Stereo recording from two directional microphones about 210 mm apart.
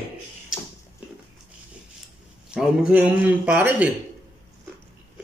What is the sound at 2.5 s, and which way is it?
A man's voice, 5° right (ahead or behind).